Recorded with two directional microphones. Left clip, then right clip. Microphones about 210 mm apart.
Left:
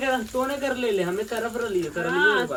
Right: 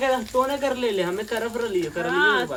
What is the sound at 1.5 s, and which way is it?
Speech, 50° right (ahead or behind).